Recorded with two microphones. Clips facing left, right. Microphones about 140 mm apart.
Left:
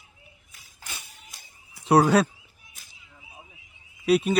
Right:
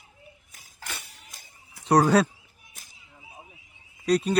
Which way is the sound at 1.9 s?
5° left (ahead or behind).